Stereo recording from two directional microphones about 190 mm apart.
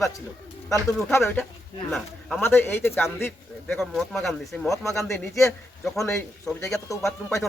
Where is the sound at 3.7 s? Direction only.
Centre (ahead or behind).